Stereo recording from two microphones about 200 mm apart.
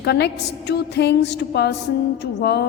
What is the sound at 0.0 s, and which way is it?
A woman's voice, 55° left (ahead or behind).